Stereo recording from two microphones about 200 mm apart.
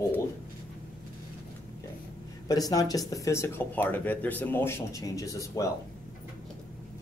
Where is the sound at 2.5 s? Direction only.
20° left (ahead or behind).